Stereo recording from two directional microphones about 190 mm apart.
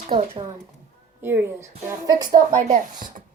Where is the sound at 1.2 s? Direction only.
15° right (ahead or behind).